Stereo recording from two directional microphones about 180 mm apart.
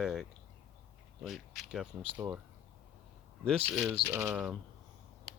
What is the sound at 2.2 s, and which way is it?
Typing, 20° right (ahead or behind).